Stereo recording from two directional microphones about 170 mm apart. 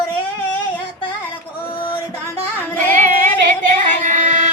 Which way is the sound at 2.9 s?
50° right (ahead or behind).